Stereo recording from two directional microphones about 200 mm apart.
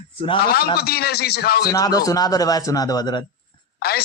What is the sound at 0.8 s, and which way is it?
Speech, 50° left (ahead or behind).